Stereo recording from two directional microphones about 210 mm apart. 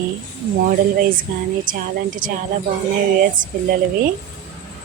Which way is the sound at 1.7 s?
40° right (ahead or behind).